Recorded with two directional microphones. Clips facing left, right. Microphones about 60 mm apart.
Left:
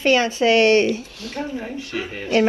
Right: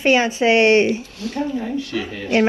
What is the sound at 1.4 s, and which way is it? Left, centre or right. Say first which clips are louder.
Speech: right 6 dB; left.